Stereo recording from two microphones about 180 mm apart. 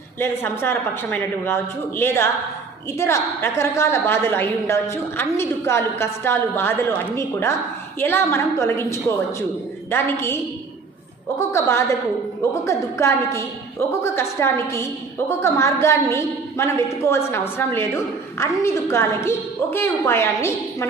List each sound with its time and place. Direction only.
0.2 s a woman's voice: 15° left (ahead or behind)
11.3 s a woman's voice: 15° left (ahead or behind)